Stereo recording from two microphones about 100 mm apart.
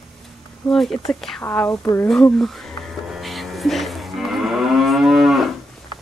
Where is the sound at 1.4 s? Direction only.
25° left (ahead or behind).